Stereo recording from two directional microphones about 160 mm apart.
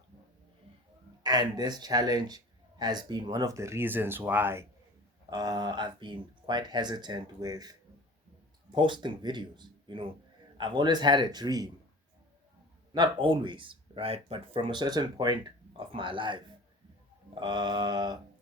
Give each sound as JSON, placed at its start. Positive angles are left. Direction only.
{"t": 1.2, "sound": "a man's voice", "side_deg": -25}
{"t": 5.3, "sound": "a man's voice", "side_deg": -25}
{"t": 12.9, "sound": "speech", "side_deg": -30}
{"t": 17.4, "sound": "a man's voice", "side_deg": -25}